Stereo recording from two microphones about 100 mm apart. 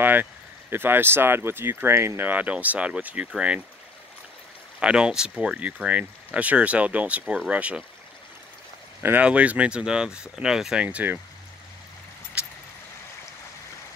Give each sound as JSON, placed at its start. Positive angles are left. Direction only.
{"t": 0.0, "sound": "speech", "side_deg": -20}
{"t": 4.7, "sound": "speech", "side_deg": -10}
{"t": 9.0, "sound": "speech", "side_deg": -15}
{"t": 12.4, "sound": "vehicle", "side_deg": -10}